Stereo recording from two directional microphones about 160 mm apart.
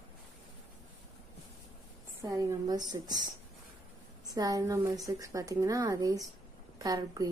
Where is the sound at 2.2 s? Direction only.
20° right (ahead or behind).